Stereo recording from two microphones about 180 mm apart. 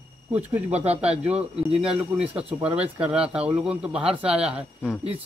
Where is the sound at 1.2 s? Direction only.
5° right (ahead or behind).